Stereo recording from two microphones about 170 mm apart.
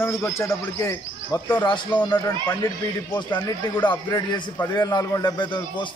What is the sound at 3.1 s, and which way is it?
A man's voice, 25° left (ahead or behind).